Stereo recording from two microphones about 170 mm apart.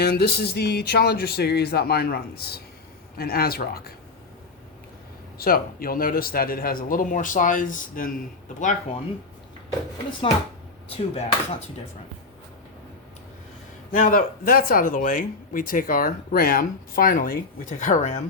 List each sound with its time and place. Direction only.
0.0 s speech: 70° left (ahead or behind)
5.4 s speech: 60° left (ahead or behind)
10.1 s speech: 30° left (ahead or behind)
13.9 s speech: 55° left (ahead or behind)